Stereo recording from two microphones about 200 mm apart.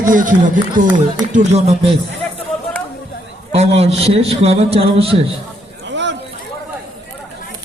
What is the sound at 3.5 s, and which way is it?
A man's voice, 30° right (ahead or behind).